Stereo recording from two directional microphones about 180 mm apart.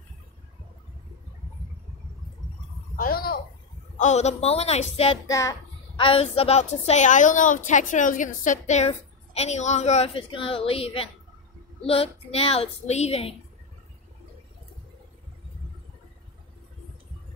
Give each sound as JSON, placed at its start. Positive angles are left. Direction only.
{"t": 3.0, "sound": "a sound", "side_deg": 55}
{"t": 4.0, "sound": "a woman's voice", "side_deg": 40}
{"t": 5.2, "sound": "a child's voice", "side_deg": 20}
{"t": 5.9, "sound": "a woman's voice", "side_deg": 30}